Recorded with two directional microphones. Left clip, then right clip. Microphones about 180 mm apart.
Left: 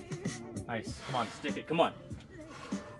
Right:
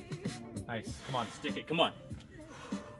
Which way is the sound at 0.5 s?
50° right (ahead or behind).